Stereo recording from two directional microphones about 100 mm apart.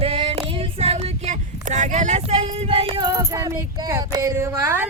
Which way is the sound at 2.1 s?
85° right.